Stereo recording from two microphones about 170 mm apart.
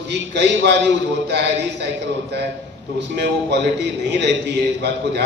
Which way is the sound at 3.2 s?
90° right.